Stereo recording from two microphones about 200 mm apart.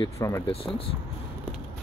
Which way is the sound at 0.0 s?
15° left (ahead or behind).